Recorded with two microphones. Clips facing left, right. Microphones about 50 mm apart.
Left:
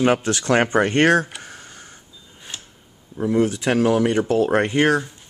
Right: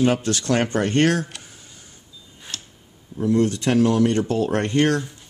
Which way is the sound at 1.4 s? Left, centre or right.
Left.